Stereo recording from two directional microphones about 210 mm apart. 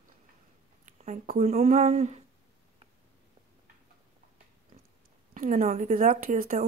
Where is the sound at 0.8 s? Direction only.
40° right (ahead or behind).